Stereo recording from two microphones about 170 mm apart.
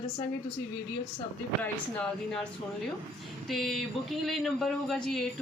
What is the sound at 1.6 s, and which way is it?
Speech, 5° left (ahead or behind).